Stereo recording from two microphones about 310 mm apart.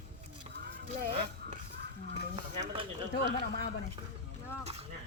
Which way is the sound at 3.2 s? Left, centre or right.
Left.